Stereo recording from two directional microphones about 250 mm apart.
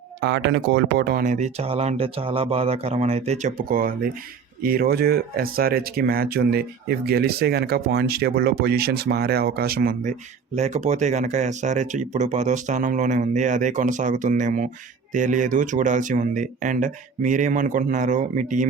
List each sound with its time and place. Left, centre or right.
0.2 s speech: right